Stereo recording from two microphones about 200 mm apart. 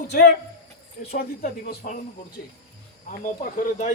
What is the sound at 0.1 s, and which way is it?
Speech, 55° left (ahead or behind).